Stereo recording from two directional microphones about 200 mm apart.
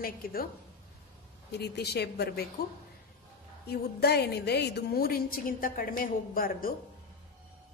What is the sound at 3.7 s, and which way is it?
A woman's voice, 55° left (ahead or behind).